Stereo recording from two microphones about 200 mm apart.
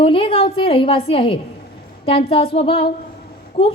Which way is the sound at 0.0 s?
25° left (ahead or behind).